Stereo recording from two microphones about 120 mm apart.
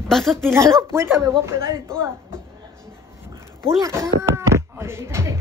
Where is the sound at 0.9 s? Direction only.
20° right (ahead or behind).